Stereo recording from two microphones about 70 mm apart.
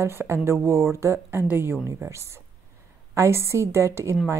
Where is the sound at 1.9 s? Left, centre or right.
Right.